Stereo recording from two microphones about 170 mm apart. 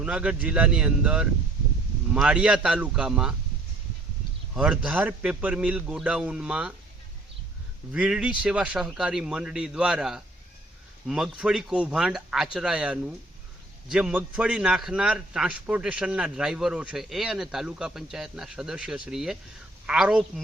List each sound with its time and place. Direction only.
0.0 s a man's voice: 5° right (ahead or behind)
4.5 s a man's voice: 5° right (ahead or behind)
7.9 s a man's voice: 5° right (ahead or behind)